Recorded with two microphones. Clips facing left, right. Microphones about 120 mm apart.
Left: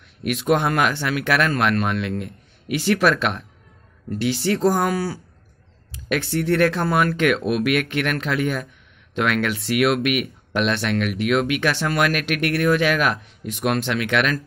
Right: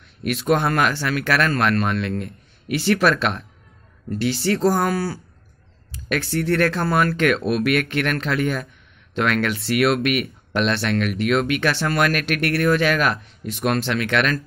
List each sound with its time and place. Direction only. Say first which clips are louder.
0.2 s speech: even; 10° left (ahead or behind)